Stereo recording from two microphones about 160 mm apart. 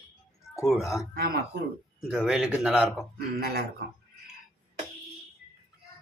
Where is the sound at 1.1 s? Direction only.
70° right (ahead or behind).